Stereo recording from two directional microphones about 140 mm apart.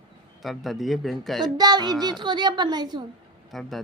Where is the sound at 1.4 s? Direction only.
30° right (ahead or behind).